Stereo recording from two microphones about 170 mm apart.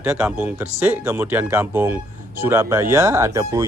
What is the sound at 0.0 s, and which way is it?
Speech, 5° right (ahead or behind).